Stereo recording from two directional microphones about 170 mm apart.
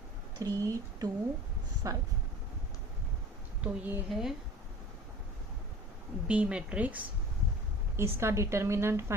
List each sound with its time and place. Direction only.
0.3 s speech: 20° right (ahead or behind)
3.6 s a woman's voice: 5° right (ahead or behind)
6.2 s a woman's voice: 5° right (ahead or behind)